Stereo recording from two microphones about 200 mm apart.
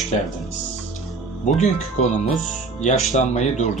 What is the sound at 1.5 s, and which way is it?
Speech, 35° left (ahead or behind).